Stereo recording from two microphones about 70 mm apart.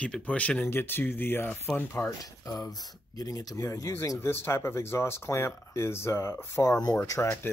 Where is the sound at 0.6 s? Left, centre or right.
Left.